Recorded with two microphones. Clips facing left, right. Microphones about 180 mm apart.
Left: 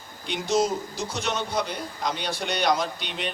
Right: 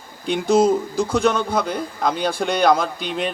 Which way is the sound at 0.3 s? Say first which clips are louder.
Right 8 dB; 55° right (ahead or behind).